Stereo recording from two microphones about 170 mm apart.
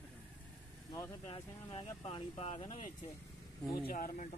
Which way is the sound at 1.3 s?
35° left (ahead or behind).